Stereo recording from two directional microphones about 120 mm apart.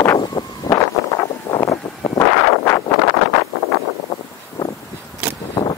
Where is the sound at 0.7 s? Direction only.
30° left (ahead or behind).